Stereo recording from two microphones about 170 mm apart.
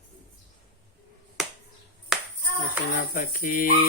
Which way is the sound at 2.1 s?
5° right (ahead or behind).